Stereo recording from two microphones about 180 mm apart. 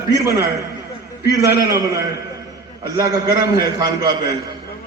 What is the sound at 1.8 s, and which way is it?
A man's voice, 20° right (ahead or behind).